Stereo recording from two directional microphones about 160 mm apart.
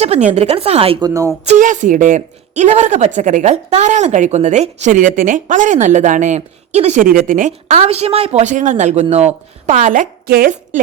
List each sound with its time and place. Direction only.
0.0 s speech: 40° right (ahead or behind)
1.0 s a woman's voice: 20° right (ahead or behind)
1.5 s speech: 50° right (ahead or behind)
7.8 s speech: 40° right (ahead or behind); by 10.5 s 65° right (ahead or behind)